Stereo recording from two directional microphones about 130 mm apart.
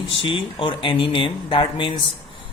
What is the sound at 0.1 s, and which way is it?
A man's voice, 40° left (ahead or behind).